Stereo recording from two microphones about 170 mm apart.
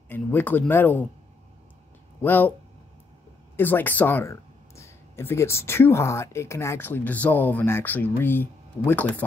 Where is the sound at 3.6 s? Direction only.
10° left (ahead or behind).